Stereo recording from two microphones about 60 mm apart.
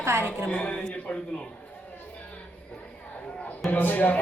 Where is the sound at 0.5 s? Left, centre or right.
Left.